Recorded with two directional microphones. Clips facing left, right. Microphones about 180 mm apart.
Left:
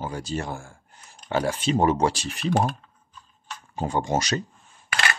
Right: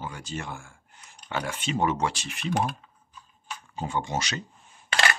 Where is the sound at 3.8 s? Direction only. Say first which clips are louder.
Left 5 dB; 40° left (ahead or behind).